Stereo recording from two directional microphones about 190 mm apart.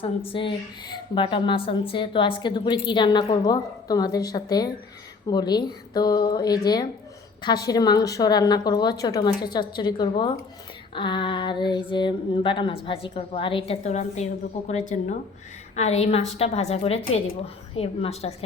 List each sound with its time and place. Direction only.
0.3 s a woman's voice: 25° left (ahead or behind)